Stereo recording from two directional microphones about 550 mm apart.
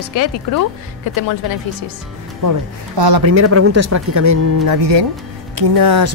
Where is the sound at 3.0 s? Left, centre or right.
Right.